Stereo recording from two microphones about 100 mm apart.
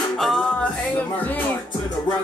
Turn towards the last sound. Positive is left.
turn(degrees=0)  # may be behind; listen again after turning